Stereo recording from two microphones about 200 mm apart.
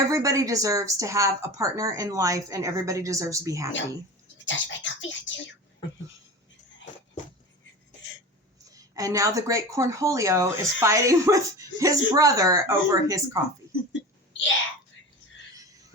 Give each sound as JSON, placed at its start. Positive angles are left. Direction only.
{"t": 0.1, "sound": "a woman's voice", "side_deg": -15}
{"t": 4.4, "sound": "speech", "side_deg": 70}
{"t": 8.7, "sound": "a woman's voice", "side_deg": -15}